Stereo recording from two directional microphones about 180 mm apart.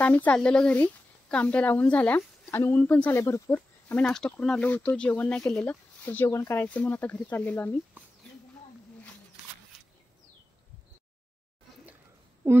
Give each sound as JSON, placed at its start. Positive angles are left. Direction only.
{"t": 0.0, "sound": "speech", "side_deg": 10}